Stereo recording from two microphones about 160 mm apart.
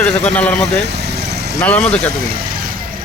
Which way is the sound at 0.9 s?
90° right.